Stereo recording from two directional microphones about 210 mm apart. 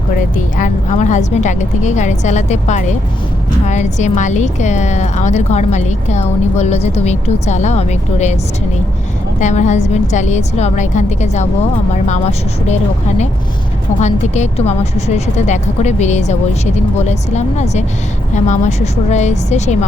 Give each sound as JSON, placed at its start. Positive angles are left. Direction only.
{"t": 0.5, "sound": "speech", "side_deg": 35}
{"t": 9.4, "sound": "speech", "side_deg": 35}